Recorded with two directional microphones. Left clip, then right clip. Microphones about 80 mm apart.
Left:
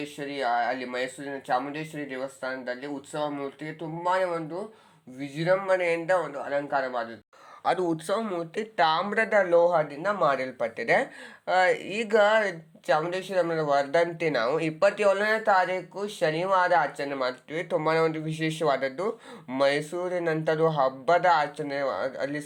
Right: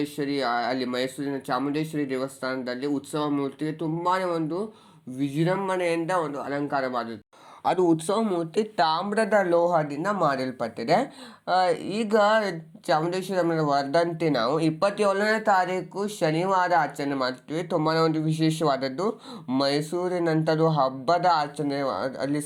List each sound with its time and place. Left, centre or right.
0.2 s speech: right
7.6 s speech: centre
11.4 s speech: centre
15.2 s speech: centre